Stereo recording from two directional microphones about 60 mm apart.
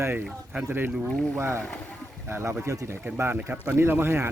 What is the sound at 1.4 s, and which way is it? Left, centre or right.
Speech, right.